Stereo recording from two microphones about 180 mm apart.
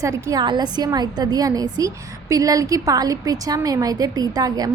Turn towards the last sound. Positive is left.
turn(degrees=-20)  # may be behind; listen again after turning